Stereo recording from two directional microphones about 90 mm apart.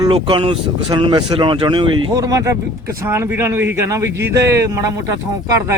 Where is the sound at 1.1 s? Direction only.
55° right (ahead or behind).